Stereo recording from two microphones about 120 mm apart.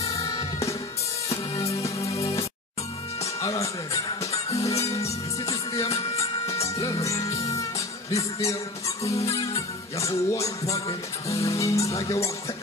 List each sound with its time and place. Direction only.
0.0 s music: 25° left (ahead or behind)
1.5 s music: 25° left (ahead or behind)